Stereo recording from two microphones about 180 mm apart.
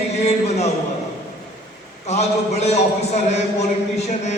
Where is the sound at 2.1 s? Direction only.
40° left (ahead or behind).